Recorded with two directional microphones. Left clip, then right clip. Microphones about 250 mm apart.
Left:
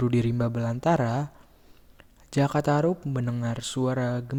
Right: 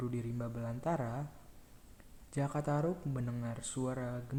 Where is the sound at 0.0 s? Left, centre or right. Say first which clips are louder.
Left 15 dB; left.